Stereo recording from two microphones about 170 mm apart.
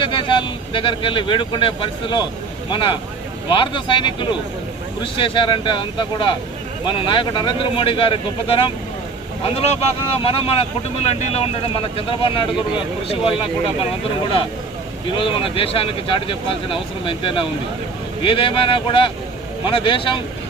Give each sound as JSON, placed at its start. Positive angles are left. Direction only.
{"t": 0.0, "sound": "speech", "side_deg": 30}
{"t": 10.2, "sound": "speech", "side_deg": 35}
{"t": 15.1, "sound": "speech", "side_deg": 30}